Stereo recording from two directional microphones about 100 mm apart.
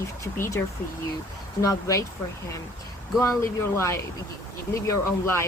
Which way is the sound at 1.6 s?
35° left (ahead or behind).